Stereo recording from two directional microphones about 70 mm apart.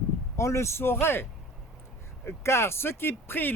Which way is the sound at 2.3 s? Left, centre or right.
Left.